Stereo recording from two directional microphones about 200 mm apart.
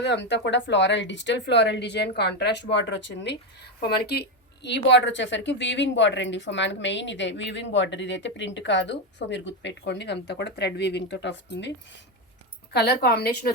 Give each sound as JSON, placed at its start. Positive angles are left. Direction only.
{"t": 0.0, "sound": "a woman's voice", "side_deg": 60}
{"t": 12.7, "sound": "a woman's voice", "side_deg": 55}